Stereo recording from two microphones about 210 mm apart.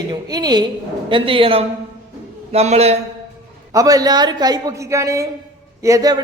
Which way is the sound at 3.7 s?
15° right (ahead or behind).